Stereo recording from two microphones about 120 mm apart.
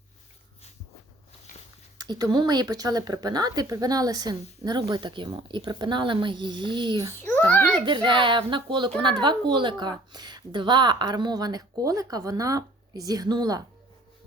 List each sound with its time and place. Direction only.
2.0 s speech: 35° right (ahead or behind)
7.3 s a child's voice: 15° left (ahead or behind)
7.9 s speech: 45° right (ahead or behind)